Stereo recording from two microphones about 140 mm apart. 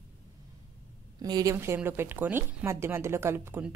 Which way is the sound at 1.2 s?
25° right (ahead or behind).